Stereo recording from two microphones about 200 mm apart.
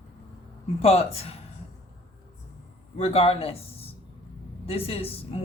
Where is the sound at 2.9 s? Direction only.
30° left (ahead or behind).